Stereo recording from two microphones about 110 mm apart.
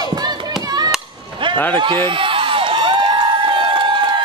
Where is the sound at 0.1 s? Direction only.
40° right (ahead or behind).